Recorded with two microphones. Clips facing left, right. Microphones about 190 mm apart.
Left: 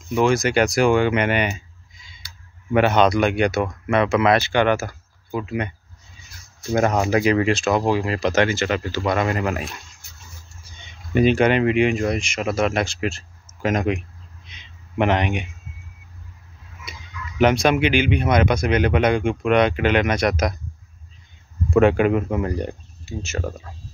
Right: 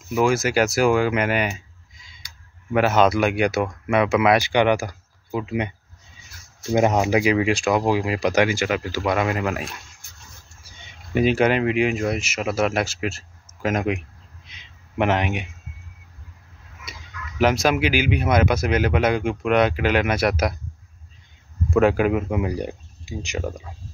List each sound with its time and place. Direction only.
0.1 s speech: 5° right (ahead or behind)
2.7 s speech: 5° right (ahead or behind)
6.7 s speech: 15° right (ahead or behind)
11.1 s speech: 5° right (ahead or behind)
14.5 s a sound: 5° right (ahead or behind)
17.4 s speech: centre (ahead or behind)
21.6 s speech: centre (ahead or behind)